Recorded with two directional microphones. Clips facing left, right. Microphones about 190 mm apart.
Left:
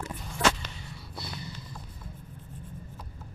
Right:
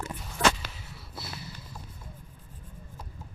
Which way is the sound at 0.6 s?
5° right (ahead or behind).